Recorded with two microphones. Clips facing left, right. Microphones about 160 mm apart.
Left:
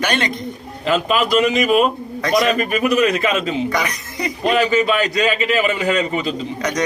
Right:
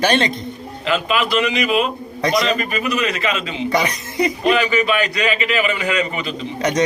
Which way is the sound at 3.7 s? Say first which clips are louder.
Right 2 dB; 25° right (ahead or behind).